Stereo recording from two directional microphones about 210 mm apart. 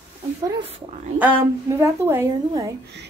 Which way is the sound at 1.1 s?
10° right (ahead or behind).